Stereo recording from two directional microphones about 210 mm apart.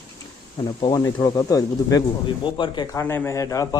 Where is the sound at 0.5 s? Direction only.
25° left (ahead or behind).